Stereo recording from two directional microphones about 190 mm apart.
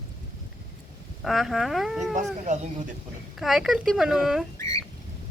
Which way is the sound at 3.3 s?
Centre (ahead or behind).